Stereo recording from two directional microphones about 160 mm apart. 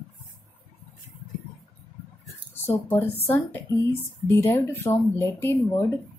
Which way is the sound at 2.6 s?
15° left (ahead or behind).